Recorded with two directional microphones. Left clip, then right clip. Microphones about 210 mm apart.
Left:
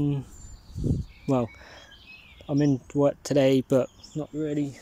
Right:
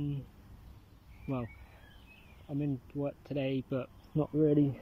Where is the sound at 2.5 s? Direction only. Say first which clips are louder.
Left 13 dB; 30° left (ahead or behind).